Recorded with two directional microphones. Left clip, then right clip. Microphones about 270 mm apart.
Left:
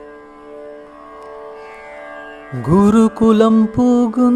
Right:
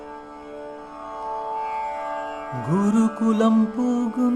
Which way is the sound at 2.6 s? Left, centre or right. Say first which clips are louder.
Left 10 dB; left.